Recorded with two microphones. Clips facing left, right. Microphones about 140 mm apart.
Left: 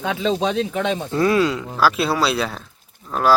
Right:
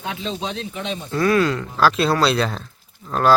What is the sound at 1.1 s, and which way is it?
Speech, 20° left (ahead or behind).